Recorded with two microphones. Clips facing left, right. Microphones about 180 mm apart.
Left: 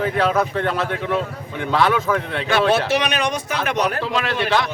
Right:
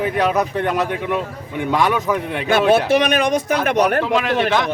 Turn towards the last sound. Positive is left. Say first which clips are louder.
# right 3 dB
turn(degrees=-15)  # may be behind; listen again after turning